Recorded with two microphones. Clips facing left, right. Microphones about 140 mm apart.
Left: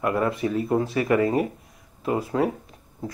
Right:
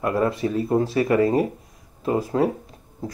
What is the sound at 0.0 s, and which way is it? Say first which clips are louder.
Speech: right 2 dB; 30° right (ahead or behind).